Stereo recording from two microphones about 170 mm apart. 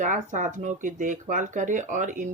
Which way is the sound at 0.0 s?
50° right (ahead or behind).